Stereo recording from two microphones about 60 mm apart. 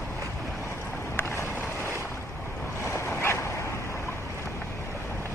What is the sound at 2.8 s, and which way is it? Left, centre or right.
Waves, left.